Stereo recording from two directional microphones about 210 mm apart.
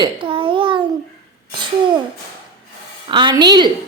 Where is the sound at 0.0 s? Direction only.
25° right (ahead or behind).